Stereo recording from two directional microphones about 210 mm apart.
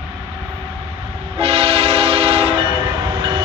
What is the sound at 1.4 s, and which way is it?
Train, 25° right (ahead or behind).